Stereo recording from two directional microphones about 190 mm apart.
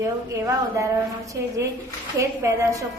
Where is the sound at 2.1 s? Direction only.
15° right (ahead or behind).